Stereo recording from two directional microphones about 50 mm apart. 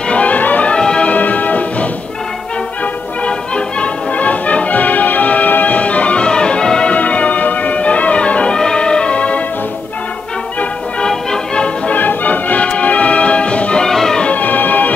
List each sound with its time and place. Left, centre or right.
0.1 s music: left
0.7 s music: centre
1.1 s music: left
3.3 s music: left
6.9 s music: left
11.1 s music: centre
11.9 s music: left
13.8 s music: centre
14.3 s music: left